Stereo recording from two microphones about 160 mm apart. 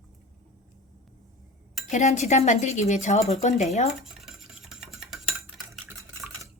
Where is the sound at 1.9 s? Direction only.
45° left (ahead or behind).